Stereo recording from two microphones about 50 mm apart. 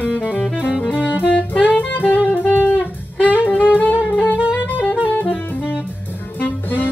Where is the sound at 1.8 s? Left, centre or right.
Left.